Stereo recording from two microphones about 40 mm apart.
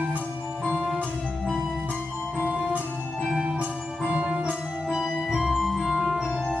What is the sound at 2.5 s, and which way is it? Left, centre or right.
Music, right.